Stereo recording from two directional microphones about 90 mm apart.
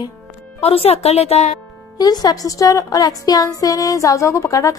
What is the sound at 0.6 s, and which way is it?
Speech, 90° left.